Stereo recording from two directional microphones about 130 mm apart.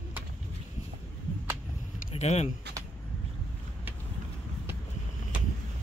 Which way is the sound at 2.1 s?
55° left (ahead or behind).